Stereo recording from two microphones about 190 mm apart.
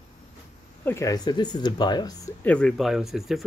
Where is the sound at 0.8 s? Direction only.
15° left (ahead or behind).